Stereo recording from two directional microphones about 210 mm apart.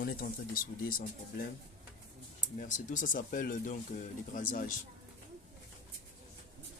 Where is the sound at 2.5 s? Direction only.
35° left (ahead or behind).